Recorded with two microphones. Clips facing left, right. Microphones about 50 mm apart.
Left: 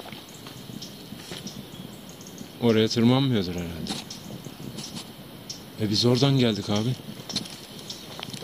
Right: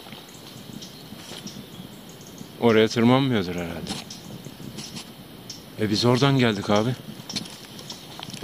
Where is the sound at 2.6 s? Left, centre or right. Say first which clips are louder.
Right 3 dB; right.